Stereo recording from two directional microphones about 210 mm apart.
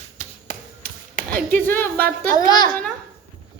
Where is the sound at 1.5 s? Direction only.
10° left (ahead or behind).